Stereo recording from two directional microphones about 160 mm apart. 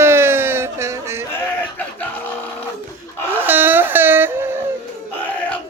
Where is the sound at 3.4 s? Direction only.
10° right (ahead or behind).